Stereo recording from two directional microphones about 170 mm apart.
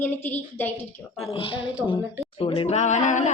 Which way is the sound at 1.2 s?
30° left (ahead or behind).